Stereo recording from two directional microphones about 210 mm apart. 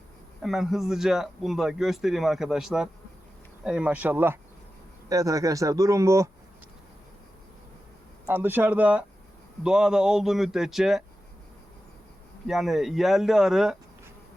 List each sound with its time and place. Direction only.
0.4 s speech: centre (ahead or behind)
8.3 s speech: 10° right (ahead or behind)
12.5 s speech: centre (ahead or behind)